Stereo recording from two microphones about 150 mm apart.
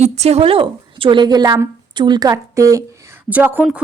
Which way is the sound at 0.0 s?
45° right (ahead or behind).